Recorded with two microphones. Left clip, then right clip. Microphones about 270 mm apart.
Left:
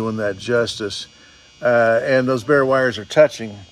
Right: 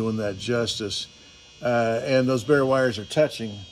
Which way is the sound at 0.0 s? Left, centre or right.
Left.